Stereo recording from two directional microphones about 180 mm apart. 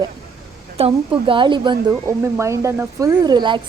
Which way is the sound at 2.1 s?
15° right (ahead or behind).